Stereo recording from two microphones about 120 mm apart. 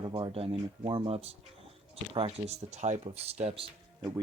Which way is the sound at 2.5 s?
70° right (ahead or behind).